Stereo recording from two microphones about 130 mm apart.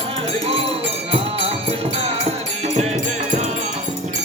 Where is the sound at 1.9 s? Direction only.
55° right (ahead or behind).